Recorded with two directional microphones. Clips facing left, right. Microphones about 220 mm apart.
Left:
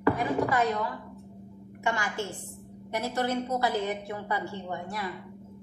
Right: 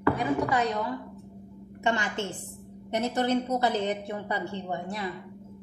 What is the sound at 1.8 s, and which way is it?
A woman's voice, 20° right (ahead or behind).